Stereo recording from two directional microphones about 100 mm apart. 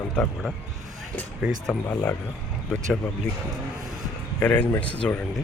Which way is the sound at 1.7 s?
10° left (ahead or behind).